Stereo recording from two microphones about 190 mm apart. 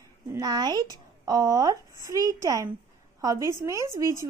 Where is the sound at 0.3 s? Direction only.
20° right (ahead or behind).